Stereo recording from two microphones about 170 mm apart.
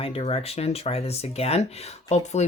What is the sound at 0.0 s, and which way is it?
Speech, 35° left (ahead or behind).